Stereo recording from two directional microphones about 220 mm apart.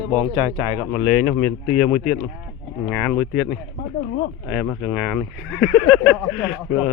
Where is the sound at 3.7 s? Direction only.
35° left (ahead or behind).